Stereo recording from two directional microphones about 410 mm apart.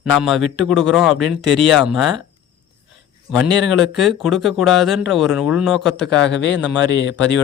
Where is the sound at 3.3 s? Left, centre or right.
Centre.